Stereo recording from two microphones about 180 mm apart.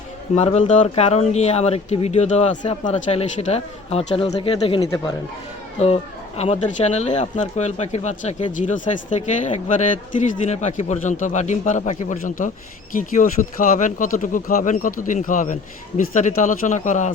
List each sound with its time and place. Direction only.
0.3 s speech: 35° left (ahead or behind)
4.8 s speech: 20° left (ahead or behind)
5.8 s speech: 35° left (ahead or behind)